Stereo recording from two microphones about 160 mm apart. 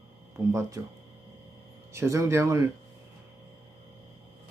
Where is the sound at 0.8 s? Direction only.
20° right (ahead or behind).